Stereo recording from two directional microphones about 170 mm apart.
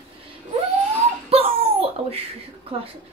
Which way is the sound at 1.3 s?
35° right (ahead or behind).